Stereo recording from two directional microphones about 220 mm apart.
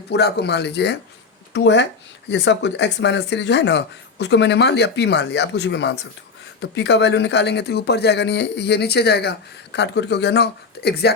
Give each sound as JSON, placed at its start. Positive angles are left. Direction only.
{"t": 0.1, "sound": "speech", "side_deg": 50}